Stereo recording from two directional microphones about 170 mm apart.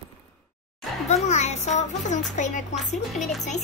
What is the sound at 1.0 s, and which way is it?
A child's voice, 40° left (ahead or behind).